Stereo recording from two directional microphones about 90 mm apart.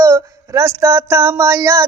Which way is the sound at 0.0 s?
35° right (ahead or behind).